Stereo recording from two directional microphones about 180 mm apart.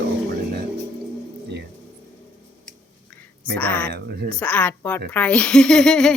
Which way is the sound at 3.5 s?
10° left (ahead or behind).